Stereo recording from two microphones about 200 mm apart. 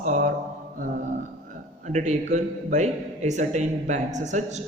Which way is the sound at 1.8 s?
35° right (ahead or behind).